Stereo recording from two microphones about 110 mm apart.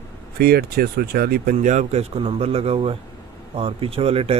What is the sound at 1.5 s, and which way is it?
A man's voice, 90° right.